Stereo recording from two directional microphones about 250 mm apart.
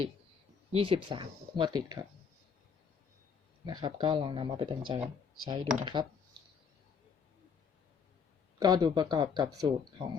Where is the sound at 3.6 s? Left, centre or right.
Centre.